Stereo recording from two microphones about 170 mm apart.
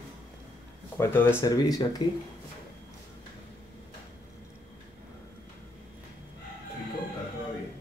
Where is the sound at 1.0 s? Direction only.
10° left (ahead or behind).